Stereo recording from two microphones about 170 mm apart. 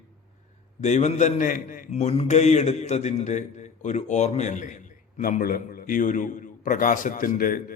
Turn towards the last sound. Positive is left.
turn(degrees=55)  # may be behind; listen again after turning